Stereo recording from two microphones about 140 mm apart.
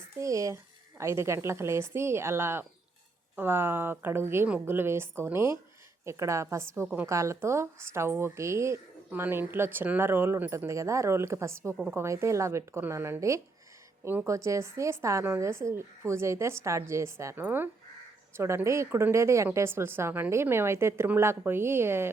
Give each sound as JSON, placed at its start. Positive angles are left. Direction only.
{"t": 0.2, "sound": "a woman's voice", "side_deg": -25}
{"t": 7.1, "sound": "a woman's voice", "side_deg": -20}